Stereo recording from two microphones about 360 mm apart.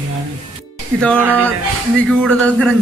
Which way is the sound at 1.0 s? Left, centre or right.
Centre.